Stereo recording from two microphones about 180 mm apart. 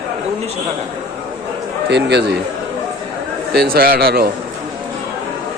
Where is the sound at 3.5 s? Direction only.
60° right (ahead or behind).